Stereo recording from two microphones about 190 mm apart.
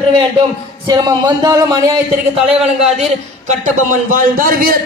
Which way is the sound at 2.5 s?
5° right (ahead or behind).